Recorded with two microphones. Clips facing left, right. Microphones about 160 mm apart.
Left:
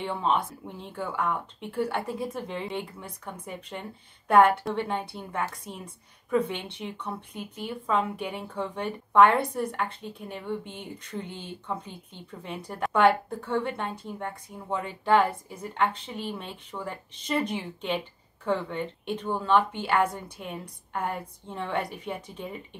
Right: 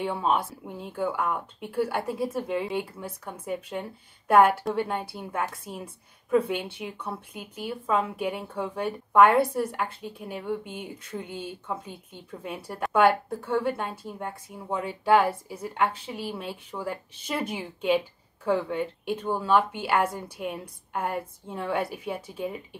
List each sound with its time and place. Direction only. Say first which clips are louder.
0.0 s a woman's voice: right 1 dB; 5° right (ahead or behind)